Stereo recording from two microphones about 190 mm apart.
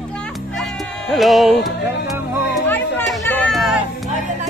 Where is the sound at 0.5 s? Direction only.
Centre (ahead or behind).